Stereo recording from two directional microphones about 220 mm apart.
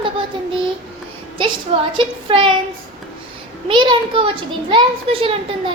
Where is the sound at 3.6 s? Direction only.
20° right (ahead or behind).